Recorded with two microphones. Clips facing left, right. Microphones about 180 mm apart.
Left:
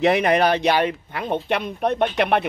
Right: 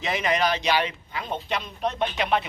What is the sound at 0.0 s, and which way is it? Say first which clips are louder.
A man's voice: left 7 dB; 60° left (ahead or behind).